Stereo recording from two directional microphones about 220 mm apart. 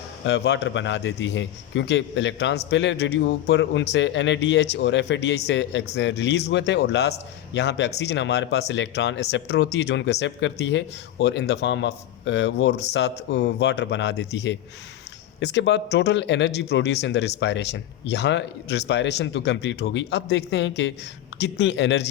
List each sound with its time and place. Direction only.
0.3 s speech: 50° left (ahead or behind)